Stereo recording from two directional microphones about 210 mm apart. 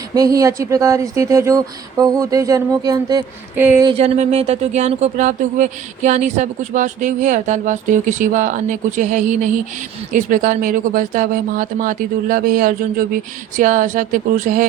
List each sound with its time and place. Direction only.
0.1 s speech: 15° right (ahead or behind)
3.8 s speech: 30° right (ahead or behind)